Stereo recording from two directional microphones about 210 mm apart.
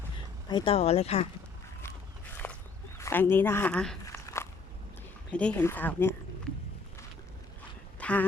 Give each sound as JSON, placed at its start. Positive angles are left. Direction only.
{"t": 0.4, "sound": "speech", "side_deg": 25}
{"t": 2.4, "sound": "walk", "side_deg": 5}
{"t": 3.0, "sound": "speech", "side_deg": 10}
{"t": 4.0, "sound": "walk", "side_deg": 15}
{"t": 5.3, "sound": "speech", "side_deg": 5}
{"t": 7.9, "sound": "walk", "side_deg": 5}